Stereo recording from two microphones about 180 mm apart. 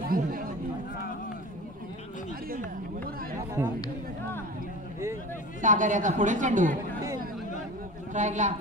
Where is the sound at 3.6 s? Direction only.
15° right (ahead or behind).